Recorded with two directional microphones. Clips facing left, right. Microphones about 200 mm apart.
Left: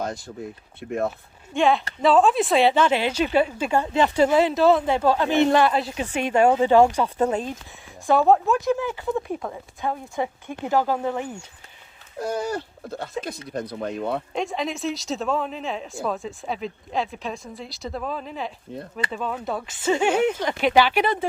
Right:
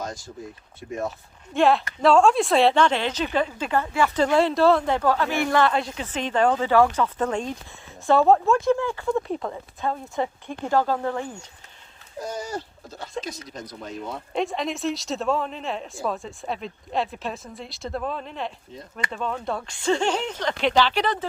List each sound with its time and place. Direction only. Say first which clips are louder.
0.0 s speech: left 4 dB; 60° left (ahead or behind)
1.5 s a woman's voice: right 1 dB; centre (ahead or behind); by 4.2 s 20° left (ahead or behind)
4.2 s speech: left 1 dB; 5° left (ahead or behind)
4.9 s speech: left 3 dB; 20° left (ahead or behind)
5.6 s speech: left 1 dB; 5° left (ahead or behind)
5.9 s a woman's voice: left 3 dB; 15° left (ahead or behind)
8.2 s a woman's voice: right 1 dB; centre (ahead or behind)
12.2 s speech: left 5 dB; 60° left (ahead or behind)
14.3 s a woman's voice: right 1 dB; centre (ahead or behind)